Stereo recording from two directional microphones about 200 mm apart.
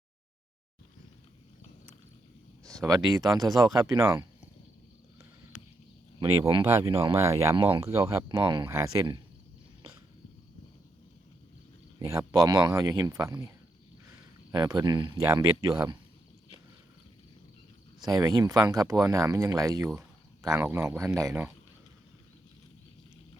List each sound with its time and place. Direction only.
2.8 s speech: 20° right (ahead or behind)
6.1 s speech: 20° right (ahead or behind)
11.9 s speech: 15° right (ahead or behind)
14.5 s speech: 20° right (ahead or behind)
18.0 s speech: 20° right (ahead or behind)